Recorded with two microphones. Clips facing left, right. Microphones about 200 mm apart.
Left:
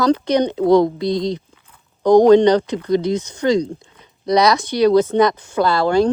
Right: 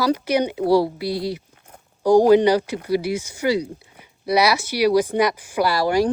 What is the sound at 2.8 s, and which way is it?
Speech, 10° right (ahead or behind).